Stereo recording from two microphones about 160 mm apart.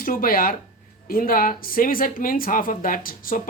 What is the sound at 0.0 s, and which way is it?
A woman's voice, 60° left (ahead or behind).